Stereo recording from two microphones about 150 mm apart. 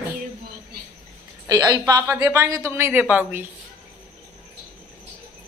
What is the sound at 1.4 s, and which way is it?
A woman's voice, 25° right (ahead or behind).